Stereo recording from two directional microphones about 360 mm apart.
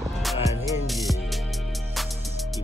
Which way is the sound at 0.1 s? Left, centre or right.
Centre.